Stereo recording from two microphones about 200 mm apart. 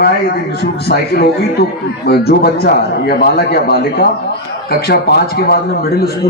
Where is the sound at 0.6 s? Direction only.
50° left (ahead or behind).